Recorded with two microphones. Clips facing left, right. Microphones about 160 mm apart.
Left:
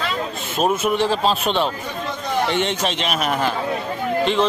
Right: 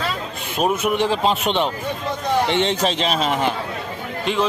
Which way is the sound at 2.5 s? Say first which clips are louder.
Right 2 dB; 30° right (ahead or behind).